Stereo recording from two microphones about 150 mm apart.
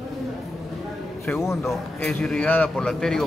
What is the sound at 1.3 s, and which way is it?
Speech, 20° left (ahead or behind).